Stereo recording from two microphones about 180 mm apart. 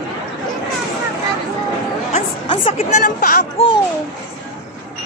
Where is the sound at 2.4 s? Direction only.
30° left (ahead or behind); by 3.4 s 50° left (ahead or behind).